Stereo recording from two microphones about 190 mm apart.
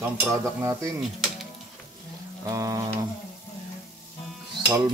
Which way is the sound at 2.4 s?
15° right (ahead or behind).